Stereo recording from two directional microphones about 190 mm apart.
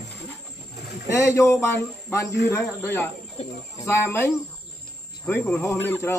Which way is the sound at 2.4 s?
15° left (ahead or behind).